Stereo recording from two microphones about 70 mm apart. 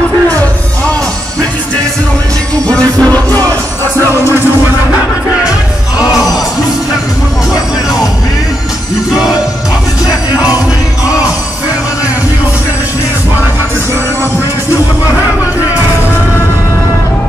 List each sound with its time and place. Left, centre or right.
2.7 s music: centre